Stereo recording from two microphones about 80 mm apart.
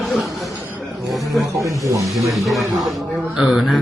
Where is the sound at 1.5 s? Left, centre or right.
Right.